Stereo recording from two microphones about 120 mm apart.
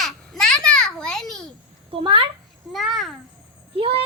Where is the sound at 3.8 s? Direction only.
50° right (ahead or behind).